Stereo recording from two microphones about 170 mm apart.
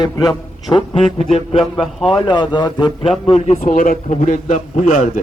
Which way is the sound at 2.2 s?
25° left (ahead or behind).